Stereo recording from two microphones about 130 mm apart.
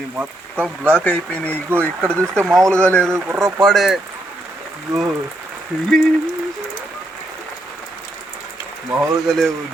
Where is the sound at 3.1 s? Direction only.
20° right (ahead or behind).